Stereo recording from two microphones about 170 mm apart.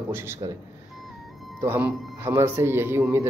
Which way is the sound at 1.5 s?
10° right (ahead or behind).